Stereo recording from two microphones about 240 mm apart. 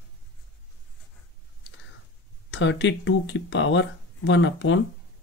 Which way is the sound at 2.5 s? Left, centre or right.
Left.